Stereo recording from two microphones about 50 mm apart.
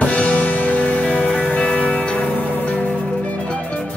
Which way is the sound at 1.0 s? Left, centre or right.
Centre.